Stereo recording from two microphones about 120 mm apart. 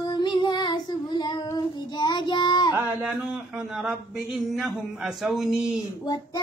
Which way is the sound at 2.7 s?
20° right (ahead or behind).